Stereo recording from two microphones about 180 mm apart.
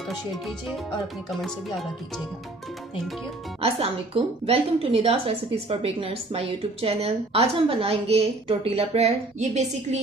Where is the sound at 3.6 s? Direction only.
30° right (ahead or behind).